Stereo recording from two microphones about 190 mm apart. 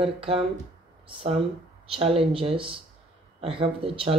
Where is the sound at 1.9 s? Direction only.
30° right (ahead or behind).